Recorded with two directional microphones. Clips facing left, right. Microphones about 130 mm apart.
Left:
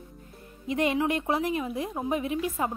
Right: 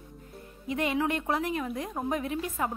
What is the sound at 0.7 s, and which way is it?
A woman's voice, 20° left (ahead or behind).